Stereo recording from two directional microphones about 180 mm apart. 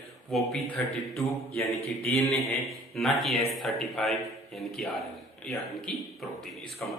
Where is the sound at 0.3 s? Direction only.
Centre (ahead or behind).